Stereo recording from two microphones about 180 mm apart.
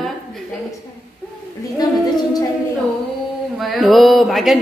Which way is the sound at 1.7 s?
20° left (ahead or behind).